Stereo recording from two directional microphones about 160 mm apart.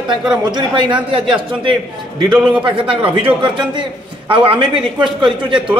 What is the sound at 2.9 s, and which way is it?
A man's voice, 30° right (ahead or behind).